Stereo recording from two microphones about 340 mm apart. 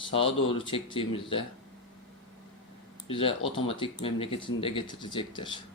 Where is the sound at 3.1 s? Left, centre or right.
Centre.